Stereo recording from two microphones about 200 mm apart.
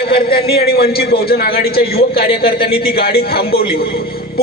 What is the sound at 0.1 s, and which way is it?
A man's voice, 50° left (ahead or behind).